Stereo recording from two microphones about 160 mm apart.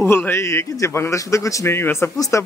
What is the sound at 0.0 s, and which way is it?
A man's voice, 15° left (ahead or behind).